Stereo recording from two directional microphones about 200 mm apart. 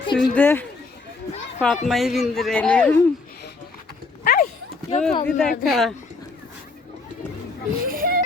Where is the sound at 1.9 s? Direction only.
Centre (ahead or behind).